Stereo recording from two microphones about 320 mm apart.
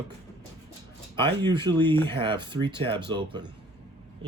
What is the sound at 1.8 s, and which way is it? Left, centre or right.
Speech, centre.